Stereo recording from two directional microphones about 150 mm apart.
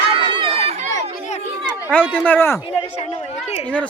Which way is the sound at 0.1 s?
35° right (ahead or behind).